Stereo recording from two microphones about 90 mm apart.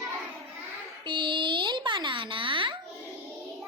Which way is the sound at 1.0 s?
60° right (ahead or behind).